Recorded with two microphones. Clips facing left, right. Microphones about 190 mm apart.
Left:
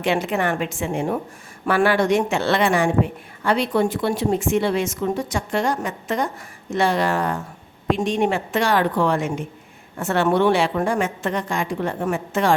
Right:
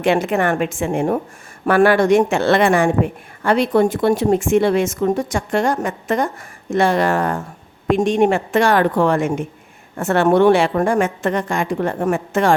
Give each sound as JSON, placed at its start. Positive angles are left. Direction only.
{"t": 0.0, "sound": "a woman's voice", "side_deg": -50}